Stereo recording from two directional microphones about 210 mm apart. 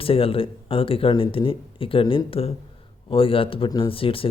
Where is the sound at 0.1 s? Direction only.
25° left (ahead or behind).